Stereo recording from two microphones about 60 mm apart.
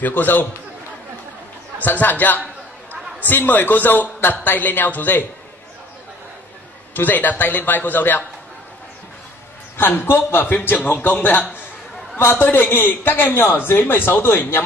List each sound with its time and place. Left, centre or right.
0.0 s a man's voice: left
1.8 s a man's voice: left
7.0 s a man's voice: left
9.8 s a man's voice: left